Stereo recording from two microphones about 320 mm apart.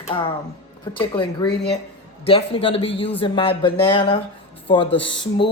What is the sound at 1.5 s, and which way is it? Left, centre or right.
Speech, left.